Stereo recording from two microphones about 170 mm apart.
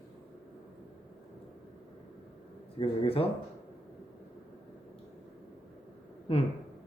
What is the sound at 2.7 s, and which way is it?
Speech, 35° left (ahead or behind).